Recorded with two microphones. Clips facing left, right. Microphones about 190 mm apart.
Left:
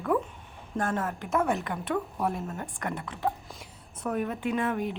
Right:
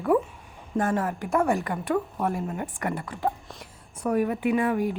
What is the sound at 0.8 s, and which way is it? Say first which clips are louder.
A woman's voice: right 3 dB; centre (ahead or behind).